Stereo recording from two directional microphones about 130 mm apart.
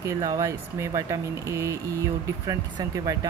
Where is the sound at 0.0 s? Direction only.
25° right (ahead or behind).